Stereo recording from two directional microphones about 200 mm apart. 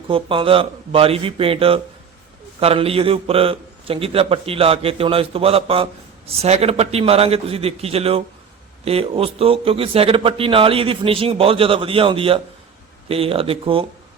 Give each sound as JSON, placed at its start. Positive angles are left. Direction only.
{"t": 0.1, "sound": "a man's voice", "side_deg": -25}